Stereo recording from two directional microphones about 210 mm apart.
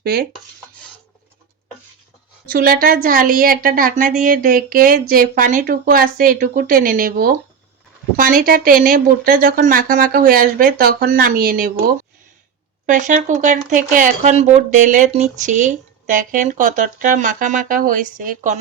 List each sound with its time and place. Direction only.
0.0 s dishes: 45° right (ahead or behind)
2.5 s a woman's voice: 45° right (ahead or behind)
12.8 s speech: 35° right (ahead or behind)